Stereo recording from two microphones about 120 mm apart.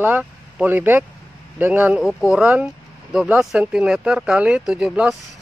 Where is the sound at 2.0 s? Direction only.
Centre (ahead or behind).